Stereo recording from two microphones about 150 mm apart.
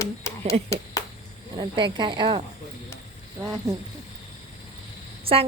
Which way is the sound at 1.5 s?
30° right (ahead or behind).